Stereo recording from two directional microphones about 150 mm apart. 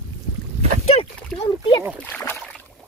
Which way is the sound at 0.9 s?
45° left (ahead or behind).